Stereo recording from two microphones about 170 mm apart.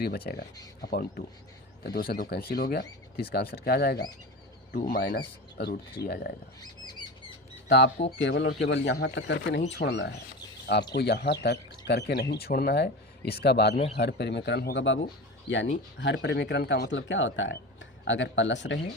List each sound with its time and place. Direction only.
0.3 s speech: 60° left (ahead or behind)
6.6 s a sound: 25° left (ahead or behind)
7.7 s speech: 90° left
12.3 s speech: 65° left (ahead or behind); by 18.8 s 90° left